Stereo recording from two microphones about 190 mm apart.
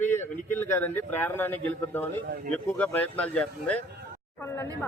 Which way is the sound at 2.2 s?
50° right (ahead or behind).